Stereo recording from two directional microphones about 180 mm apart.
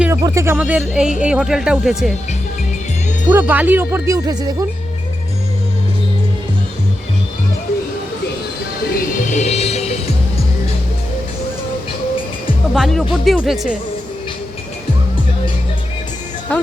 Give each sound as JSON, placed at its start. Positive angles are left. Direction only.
{"t": 0.0, "sound": "speech", "side_deg": -15}
{"t": 3.2, "sound": "speech", "side_deg": -10}
{"t": 9.0, "sound": "music", "side_deg": 40}
{"t": 12.7, "sound": "speech", "side_deg": 0}